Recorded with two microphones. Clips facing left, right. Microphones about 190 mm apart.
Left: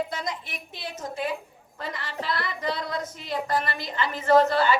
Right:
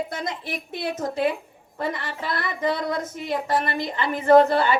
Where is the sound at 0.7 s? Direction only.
60° right (ahead or behind).